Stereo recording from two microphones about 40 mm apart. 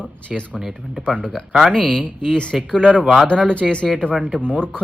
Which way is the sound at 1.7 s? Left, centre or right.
Centre.